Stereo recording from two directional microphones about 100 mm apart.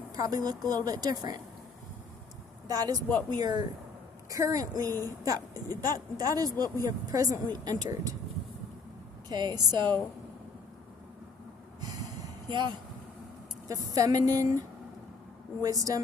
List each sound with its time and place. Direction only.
0.1 s a woman's voice: 40° right (ahead or behind)
2.6 s a woman's voice: 40° right (ahead or behind)
4.3 s a woman's voice: 35° right (ahead or behind)
9.3 s a woman's voice: 45° right (ahead or behind)
12.5 s a woman's voice: 50° right (ahead or behind)
13.7 s a woman's voice: 35° right (ahead or behind)
15.6 s a woman's voice: 35° right (ahead or behind)